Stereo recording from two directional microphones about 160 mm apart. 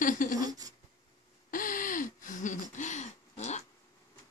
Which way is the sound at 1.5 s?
60° left (ahead or behind).